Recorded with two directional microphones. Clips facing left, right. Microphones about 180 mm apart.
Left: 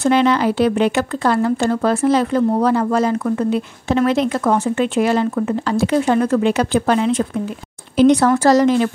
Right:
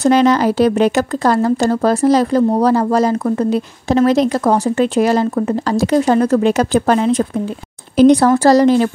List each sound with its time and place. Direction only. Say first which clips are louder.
0.0 s speech: right 3 dB; 40° right (ahead or behind)